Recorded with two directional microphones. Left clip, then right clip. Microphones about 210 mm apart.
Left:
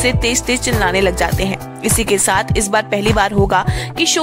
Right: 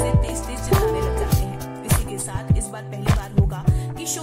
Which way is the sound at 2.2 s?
45° right (ahead or behind).